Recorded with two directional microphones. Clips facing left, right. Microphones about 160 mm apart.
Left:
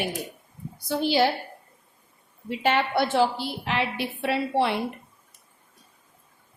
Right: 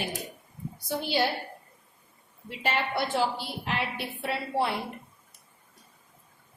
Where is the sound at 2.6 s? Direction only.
85° left.